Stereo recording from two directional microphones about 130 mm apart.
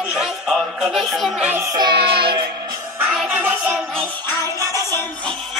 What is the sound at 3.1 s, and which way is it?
Music, 10° right (ahead or behind).